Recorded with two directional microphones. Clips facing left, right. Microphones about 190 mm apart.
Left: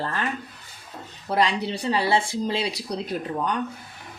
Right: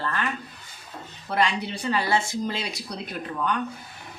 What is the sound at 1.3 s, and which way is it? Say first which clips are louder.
Speech: left 2 dB; 35° left (ahead or behind).